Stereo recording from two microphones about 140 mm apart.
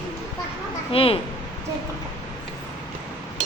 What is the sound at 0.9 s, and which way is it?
Speech, 40° left (ahead or behind).